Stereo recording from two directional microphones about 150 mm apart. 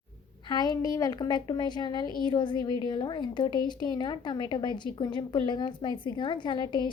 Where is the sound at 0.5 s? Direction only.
30° left (ahead or behind).